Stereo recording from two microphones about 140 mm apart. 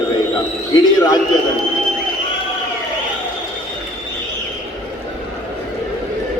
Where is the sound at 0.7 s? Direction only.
30° left (ahead or behind).